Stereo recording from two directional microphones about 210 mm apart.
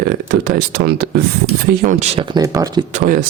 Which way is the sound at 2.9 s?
40° right (ahead or behind).